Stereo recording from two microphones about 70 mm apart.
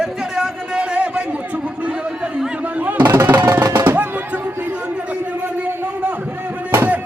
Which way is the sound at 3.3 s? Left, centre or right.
Right.